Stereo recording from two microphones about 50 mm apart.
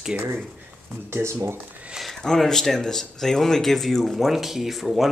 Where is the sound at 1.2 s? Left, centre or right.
Right.